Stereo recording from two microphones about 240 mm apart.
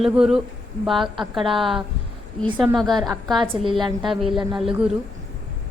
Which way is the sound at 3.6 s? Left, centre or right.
Right.